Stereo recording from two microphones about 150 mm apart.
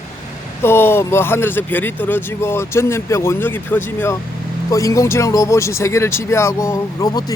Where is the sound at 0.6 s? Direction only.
15° left (ahead or behind).